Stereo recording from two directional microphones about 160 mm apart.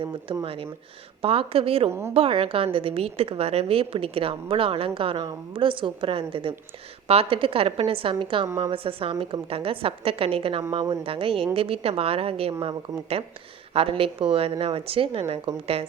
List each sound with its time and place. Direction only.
0.4 s a woman's voice: 35° right (ahead or behind)
1.9 s a woman's voice: 15° right (ahead or behind)
2.1 s a woman's voice: 35° right (ahead or behind)